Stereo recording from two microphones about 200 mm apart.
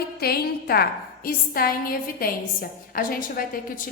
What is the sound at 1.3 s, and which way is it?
A woman's voice, 45° left (ahead or behind).